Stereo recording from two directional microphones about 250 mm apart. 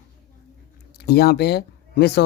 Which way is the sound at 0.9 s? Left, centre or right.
Left.